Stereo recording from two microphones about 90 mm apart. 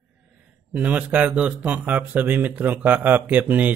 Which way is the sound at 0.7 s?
15° right (ahead or behind).